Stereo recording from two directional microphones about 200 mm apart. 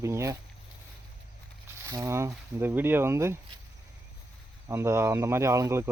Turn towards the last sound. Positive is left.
turn(degrees=-15)  # may be behind; listen again after turning